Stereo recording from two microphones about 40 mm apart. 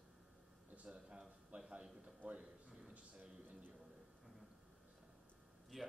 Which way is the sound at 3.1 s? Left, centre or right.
Right.